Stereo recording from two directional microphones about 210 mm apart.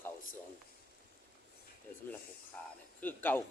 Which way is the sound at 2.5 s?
10° left (ahead or behind).